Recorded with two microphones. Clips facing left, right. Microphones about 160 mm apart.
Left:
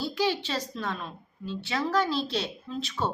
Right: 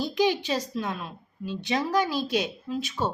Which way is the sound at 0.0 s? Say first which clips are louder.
Right 3 dB; 20° right (ahead or behind).